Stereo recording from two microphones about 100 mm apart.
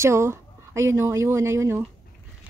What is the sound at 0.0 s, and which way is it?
A woman's voice, 25° right (ahead or behind).